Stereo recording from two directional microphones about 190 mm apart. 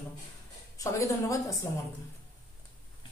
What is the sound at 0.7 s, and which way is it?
Speech, 15° left (ahead or behind).